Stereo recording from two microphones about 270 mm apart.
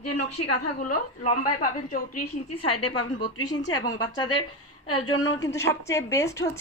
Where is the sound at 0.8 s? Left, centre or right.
Left.